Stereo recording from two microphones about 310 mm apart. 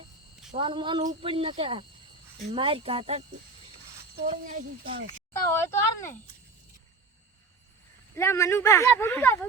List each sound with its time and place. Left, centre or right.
0.5 s speech: centre
4.3 s speech: right
5.3 s speech: centre
8.1 s speech: centre